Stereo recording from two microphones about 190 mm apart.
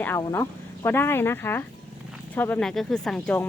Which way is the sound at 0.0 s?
15° left (ahead or behind).